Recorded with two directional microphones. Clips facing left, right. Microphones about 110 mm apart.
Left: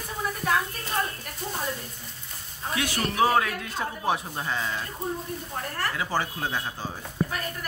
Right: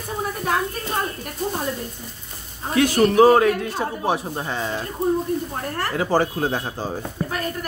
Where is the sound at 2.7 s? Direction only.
40° right (ahead or behind); by 4.8 s 25° right (ahead or behind).